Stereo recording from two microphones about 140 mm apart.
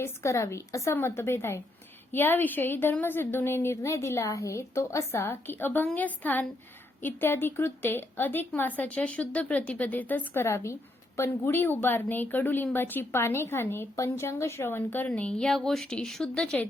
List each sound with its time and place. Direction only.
0.0 s a woman's voice: 20° left (ahead or behind)